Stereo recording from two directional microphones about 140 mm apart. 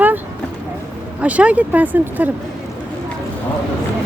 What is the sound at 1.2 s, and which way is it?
Speech, 10° right (ahead or behind).